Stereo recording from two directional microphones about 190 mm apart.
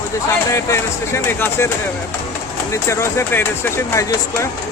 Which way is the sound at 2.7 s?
15° left (ahead or behind).